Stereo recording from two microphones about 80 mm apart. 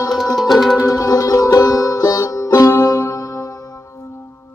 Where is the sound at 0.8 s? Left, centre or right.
Left.